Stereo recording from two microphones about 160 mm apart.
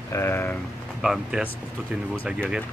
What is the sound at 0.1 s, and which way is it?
Speech, 15° left (ahead or behind).